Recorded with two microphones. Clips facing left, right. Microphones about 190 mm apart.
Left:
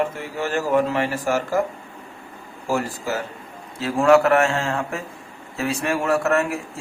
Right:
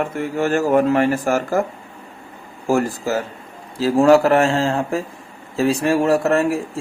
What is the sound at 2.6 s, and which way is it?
A man's voice, 45° right (ahead or behind).